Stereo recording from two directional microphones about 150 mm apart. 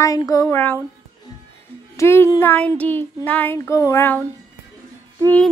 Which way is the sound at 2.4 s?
10° left (ahead or behind).